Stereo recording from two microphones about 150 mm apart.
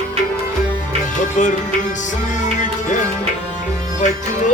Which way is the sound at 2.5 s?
55° left (ahead or behind).